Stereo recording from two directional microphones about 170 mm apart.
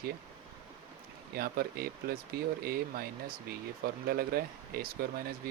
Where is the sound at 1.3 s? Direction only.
65° right (ahead or behind).